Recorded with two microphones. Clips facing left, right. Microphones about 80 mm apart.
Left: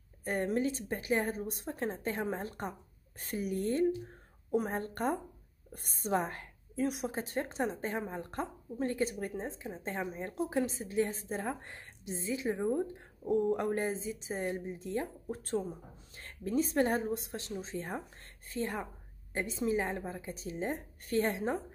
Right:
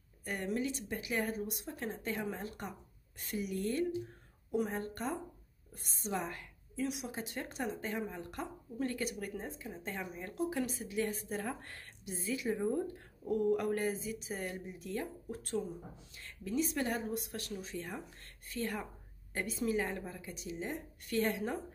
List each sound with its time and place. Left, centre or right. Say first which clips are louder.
0.2 s a woman's voice: left 5 dB; left
18.5 s a woman's voice: left 2 dB; left